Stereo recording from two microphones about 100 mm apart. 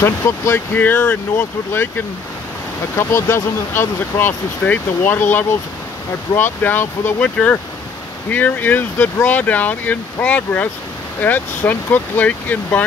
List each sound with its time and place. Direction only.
0.0 s speech: 25° left (ahead or behind)
8.3 s speech: 15° left (ahead or behind)